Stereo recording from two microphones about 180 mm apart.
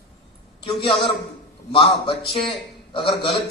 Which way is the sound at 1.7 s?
30° left (ahead or behind).